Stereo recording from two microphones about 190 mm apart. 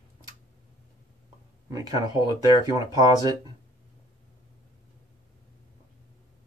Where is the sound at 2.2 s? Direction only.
20° right (ahead or behind).